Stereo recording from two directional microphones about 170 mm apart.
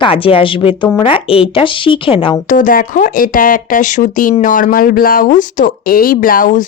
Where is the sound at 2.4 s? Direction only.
50° left (ahead or behind).